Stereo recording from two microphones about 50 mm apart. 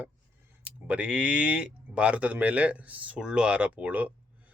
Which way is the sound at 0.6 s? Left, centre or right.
Right.